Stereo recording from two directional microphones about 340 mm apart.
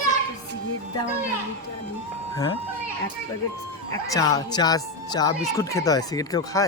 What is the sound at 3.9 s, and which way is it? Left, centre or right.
Speech, centre.